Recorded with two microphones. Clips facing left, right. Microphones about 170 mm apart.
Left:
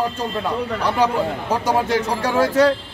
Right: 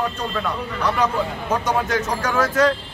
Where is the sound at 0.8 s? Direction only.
30° left (ahead or behind).